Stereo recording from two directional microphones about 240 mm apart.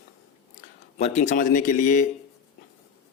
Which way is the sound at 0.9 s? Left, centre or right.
Left.